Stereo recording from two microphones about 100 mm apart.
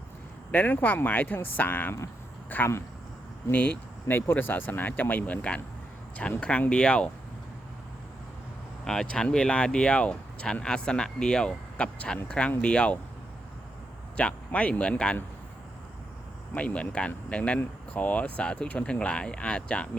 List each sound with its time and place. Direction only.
0.5 s speech: 15° left (ahead or behind)
8.8 s speech: 5° left (ahead or behind)
14.2 s speech: 15° left (ahead or behind)
16.6 s speech: 15° left (ahead or behind)